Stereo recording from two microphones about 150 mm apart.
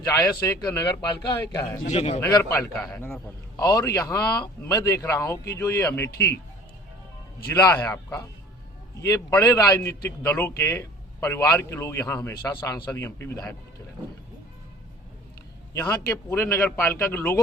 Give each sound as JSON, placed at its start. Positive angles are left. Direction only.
{"t": 0.0, "sound": "a man's voice", "side_deg": 20}
{"t": 1.9, "sound": "a man's voice", "side_deg": 45}
{"t": 2.2, "sound": "a man's voice", "side_deg": 20}
{"t": 2.7, "sound": "a man's voice", "side_deg": 5}
{"t": 3.6, "sound": "a man's voice", "side_deg": 25}
{"t": 7.5, "sound": "a man's voice", "side_deg": 15}
{"t": 15.7, "sound": "a man's voice", "side_deg": 20}